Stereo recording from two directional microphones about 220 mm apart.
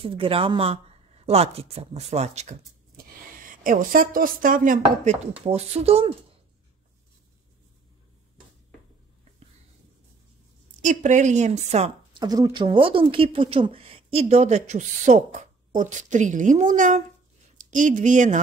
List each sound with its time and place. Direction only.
0.0 s speech: 25° right (ahead or behind)
10.8 s speech: 35° right (ahead or behind)